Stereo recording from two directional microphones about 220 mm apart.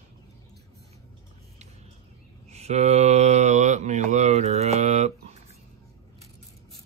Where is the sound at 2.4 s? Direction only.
30° right (ahead or behind).